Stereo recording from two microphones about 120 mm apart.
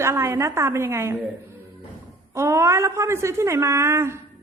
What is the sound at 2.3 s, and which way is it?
A woman's voice, 25° right (ahead or behind).